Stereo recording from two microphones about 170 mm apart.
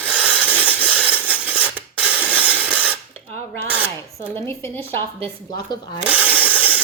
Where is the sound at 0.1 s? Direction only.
10° right (ahead or behind).